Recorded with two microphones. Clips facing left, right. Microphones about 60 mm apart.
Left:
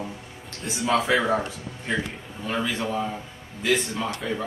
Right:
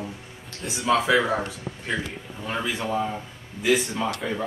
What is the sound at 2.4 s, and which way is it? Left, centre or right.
Speech, centre.